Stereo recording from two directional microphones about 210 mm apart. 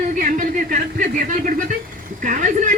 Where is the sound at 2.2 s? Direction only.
40° right (ahead or behind).